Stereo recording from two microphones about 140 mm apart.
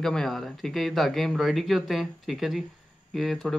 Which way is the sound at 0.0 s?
5° left (ahead or behind).